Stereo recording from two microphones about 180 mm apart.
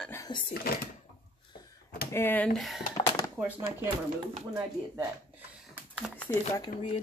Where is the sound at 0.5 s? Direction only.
55° left (ahead or behind).